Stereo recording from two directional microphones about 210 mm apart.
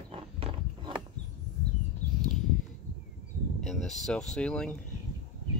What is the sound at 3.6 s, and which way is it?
Speech, centre (ahead or behind).